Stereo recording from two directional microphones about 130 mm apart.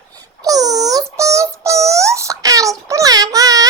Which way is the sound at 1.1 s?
25° right (ahead or behind).